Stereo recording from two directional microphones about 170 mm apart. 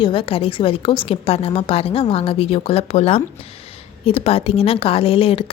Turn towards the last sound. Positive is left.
turn(degrees=35)  # may be behind; listen again after turning